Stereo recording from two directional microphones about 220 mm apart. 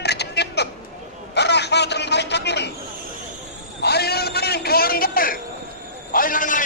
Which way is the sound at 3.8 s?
45° left (ahead or behind).